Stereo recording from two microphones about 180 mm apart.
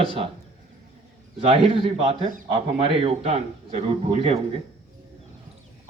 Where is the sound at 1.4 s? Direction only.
30° right (ahead or behind).